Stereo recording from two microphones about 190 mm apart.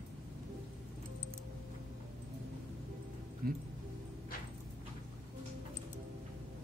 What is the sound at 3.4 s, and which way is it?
Music, 50° right (ahead or behind).